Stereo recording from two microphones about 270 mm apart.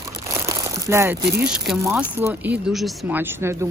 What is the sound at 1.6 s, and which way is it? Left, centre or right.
Speech, centre.